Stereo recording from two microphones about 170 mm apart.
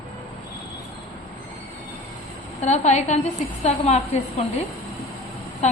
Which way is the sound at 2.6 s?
45° left (ahead or behind).